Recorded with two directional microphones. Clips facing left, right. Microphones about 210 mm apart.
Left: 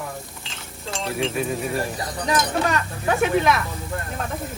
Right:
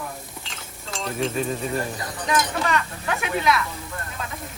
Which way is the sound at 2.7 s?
45° left (ahead or behind).